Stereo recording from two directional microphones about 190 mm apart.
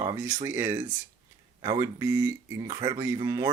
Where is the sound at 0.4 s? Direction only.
15° right (ahead or behind).